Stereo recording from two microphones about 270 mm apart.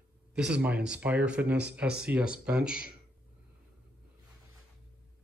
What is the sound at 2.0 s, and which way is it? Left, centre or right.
Speech, centre.